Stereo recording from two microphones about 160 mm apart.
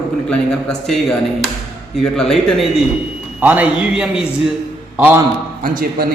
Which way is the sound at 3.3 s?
10° right (ahead or behind).